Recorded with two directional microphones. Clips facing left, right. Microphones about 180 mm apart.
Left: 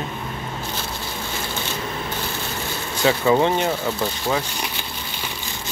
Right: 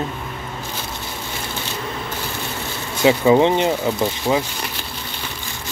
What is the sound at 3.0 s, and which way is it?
Speech, 20° right (ahead or behind).